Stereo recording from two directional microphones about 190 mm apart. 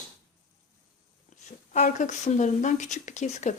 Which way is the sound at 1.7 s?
40° left (ahead or behind).